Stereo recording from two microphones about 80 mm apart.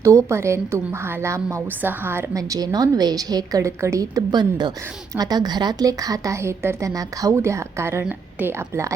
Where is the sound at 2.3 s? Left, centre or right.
Right.